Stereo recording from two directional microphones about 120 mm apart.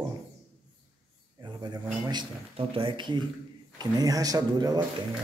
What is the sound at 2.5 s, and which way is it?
Speech, 45° right (ahead or behind).